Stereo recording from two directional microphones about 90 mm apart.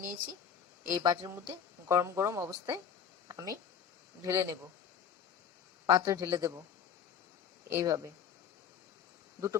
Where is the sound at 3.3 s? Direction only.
45° right (ahead or behind).